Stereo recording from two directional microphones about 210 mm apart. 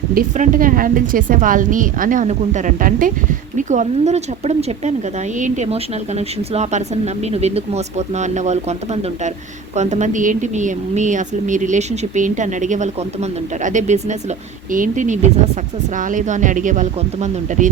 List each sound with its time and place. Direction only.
0.1 s speech: 40° right (ahead or behind)